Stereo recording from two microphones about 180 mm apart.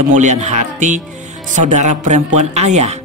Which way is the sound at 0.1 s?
45° right (ahead or behind).